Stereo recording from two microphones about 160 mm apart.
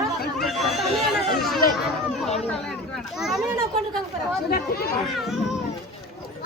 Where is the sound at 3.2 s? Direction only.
Centre (ahead or behind).